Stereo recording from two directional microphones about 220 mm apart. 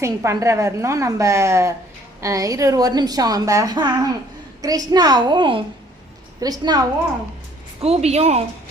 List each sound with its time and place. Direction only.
0.0 s a woman's voice: 10° right (ahead or behind)
7.8 s a woman's voice: 30° right (ahead or behind)